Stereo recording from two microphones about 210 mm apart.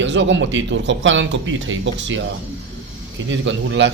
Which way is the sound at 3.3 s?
60° right (ahead or behind).